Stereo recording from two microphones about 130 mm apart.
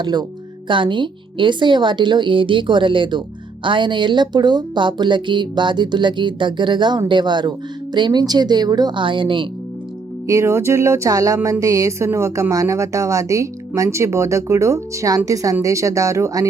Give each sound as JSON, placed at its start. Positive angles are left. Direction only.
{"t": 0.0, "sound": "a woman's voice", "side_deg": -35}
{"t": 10.2, "sound": "a woman's voice", "side_deg": -20}